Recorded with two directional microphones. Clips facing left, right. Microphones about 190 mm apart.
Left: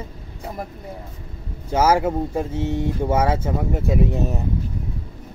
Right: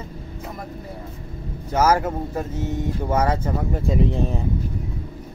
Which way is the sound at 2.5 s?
30° left (ahead or behind).